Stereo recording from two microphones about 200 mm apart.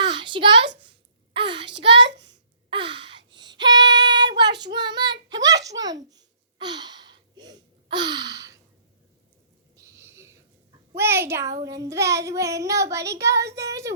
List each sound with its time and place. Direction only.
0.1 s a sound: 25° right (ahead or behind)
1.5 s a child's voice: 60° right (ahead or behind)
2.6 s gasp: 25° right (ahead or behind)
3.3 s female singing: 20° right (ahead or behind)
4.3 s child singing: 20° right (ahead or behind)
5.3 s a child's voice: 20° right (ahead or behind)
5.8 s babbling: 20° right (ahead or behind)
9.7 s a sound: 15° right (ahead or behind)
10.9 s child singing: 10° right (ahead or behind)